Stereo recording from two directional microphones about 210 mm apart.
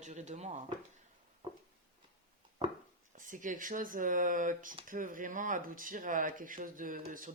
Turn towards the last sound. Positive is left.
turn(degrees=-40)  # may be behind; listen again after turning